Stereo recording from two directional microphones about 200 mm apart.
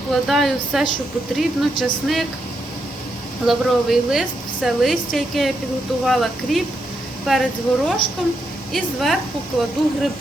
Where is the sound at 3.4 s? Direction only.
Centre (ahead or behind).